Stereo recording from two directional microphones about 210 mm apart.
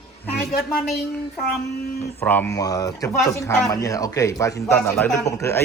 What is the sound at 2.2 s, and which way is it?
A man's voice, 10° left (ahead or behind).